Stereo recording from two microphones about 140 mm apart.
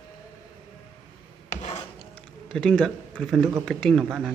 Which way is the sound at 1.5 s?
50° left (ahead or behind).